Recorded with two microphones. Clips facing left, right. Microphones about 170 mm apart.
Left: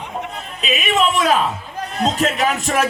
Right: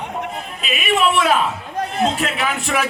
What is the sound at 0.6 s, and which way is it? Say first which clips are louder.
A man's voice: even; 40° left (ahead or behind).